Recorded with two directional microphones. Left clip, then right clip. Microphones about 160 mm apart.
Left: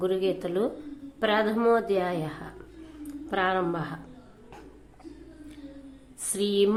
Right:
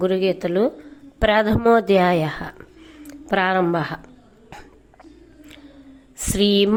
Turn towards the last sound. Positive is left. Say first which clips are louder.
# right 7 dB
turn(degrees=-40)  # may be behind; listen again after turning